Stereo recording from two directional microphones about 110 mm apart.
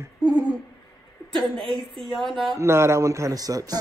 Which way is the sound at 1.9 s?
Centre (ahead or behind).